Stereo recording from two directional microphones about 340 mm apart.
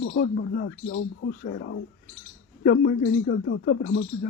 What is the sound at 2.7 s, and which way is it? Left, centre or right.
Speech, left.